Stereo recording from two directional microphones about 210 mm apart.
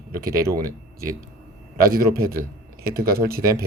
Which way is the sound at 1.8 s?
45° right (ahead or behind).